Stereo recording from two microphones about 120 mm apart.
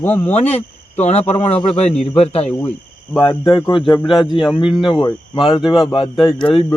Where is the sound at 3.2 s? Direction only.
45° left (ahead or behind).